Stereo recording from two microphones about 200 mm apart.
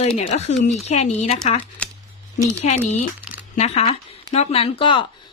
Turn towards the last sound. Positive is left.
turn(degrees=25)  # may be behind; listen again after turning